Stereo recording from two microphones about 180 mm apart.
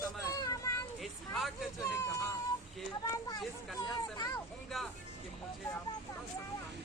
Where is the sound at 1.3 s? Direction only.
Centre (ahead or behind).